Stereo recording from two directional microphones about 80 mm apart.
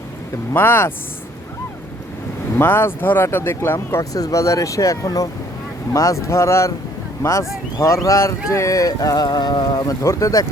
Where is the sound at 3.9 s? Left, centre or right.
Left.